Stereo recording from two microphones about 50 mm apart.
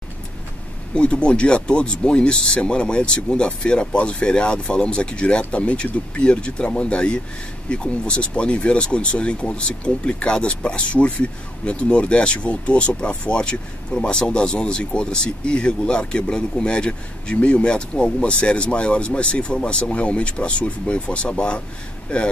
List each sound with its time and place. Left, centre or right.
0.9 s speech: left